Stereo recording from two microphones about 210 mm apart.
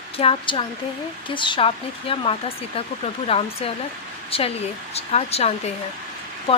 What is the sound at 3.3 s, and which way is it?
Speech, 25° left (ahead or behind).